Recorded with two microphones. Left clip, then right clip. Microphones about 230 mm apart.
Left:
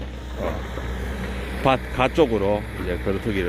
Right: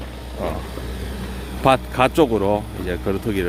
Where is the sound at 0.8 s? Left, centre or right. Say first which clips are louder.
Even; right.